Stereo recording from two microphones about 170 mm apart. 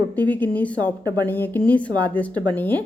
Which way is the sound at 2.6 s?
10° left (ahead or behind).